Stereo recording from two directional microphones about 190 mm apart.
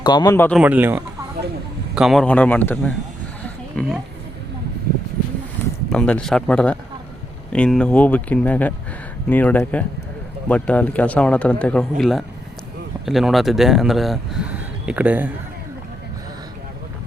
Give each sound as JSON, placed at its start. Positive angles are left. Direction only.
{"t": 0.0, "sound": "speech", "side_deg": 20}
{"t": 0.6, "sound": "speech", "side_deg": -10}
{"t": 5.9, "sound": "speech", "side_deg": 5}